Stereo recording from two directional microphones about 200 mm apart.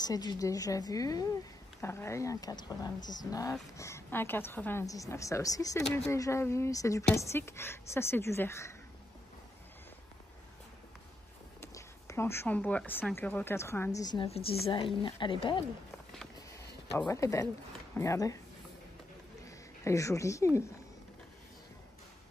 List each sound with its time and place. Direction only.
0.0 s speech: 20° left (ahead or behind)
11.6 s speech: 15° left (ahead or behind)
17.1 s speech: 15° left (ahead or behind)
19.4 s speech: 15° left (ahead or behind)